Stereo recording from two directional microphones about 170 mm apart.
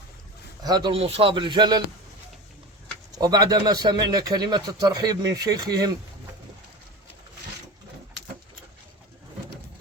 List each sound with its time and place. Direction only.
0.6 s a man's voice: 25° right (ahead or behind)
3.1 s a man's voice: 20° right (ahead or behind)